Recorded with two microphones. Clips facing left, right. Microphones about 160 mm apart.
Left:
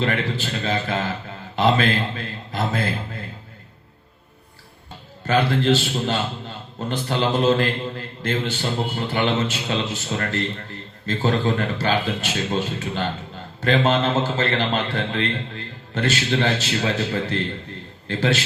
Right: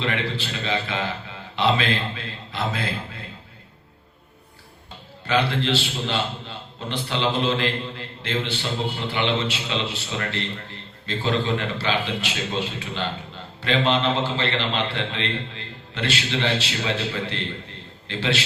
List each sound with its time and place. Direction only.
0.0 s a man's voice: 45° left (ahead or behind)
5.2 s a man's voice: 45° left (ahead or behind)